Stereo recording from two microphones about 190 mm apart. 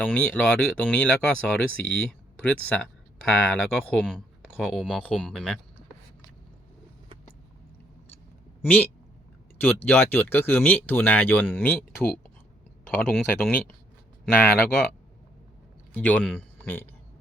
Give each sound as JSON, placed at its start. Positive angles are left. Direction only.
{"t": 0.0, "sound": "speech", "side_deg": 5}
{"t": 9.6, "sound": "speech", "side_deg": 10}
{"t": 16.0, "sound": "speech", "side_deg": 10}